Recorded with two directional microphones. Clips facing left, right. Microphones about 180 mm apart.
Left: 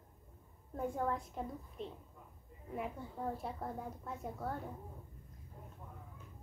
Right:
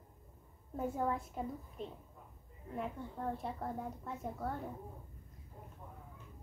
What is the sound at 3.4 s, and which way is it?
A child's voice, centre (ahead or behind).